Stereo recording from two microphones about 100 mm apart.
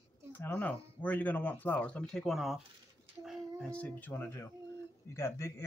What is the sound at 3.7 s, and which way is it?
Speech, 15° left (ahead or behind).